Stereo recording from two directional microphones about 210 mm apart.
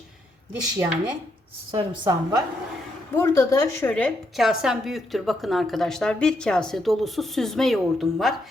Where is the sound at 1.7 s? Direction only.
20° right (ahead or behind).